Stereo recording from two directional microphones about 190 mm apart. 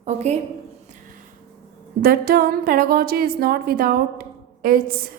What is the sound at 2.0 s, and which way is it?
A woman's voice, 50° right (ahead or behind).